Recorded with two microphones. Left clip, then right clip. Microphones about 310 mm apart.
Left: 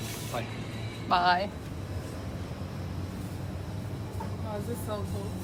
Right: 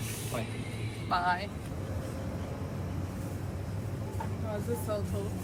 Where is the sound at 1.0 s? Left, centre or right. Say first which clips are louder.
Left 5 dB; centre.